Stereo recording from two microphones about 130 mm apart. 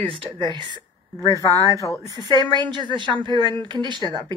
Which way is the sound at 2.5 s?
35° right (ahead or behind).